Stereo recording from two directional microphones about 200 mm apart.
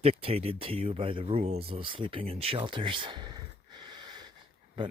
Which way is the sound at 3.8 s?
20° right (ahead or behind).